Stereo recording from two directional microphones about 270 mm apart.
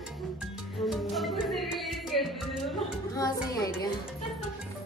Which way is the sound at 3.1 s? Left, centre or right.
Centre.